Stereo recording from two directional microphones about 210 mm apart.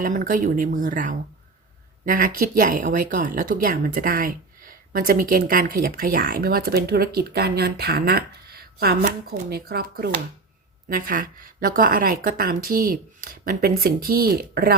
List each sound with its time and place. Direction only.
0.0 s a woman's voice: 40° right (ahead or behind)